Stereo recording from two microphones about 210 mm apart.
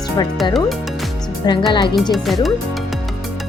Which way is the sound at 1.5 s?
20° left (ahead or behind).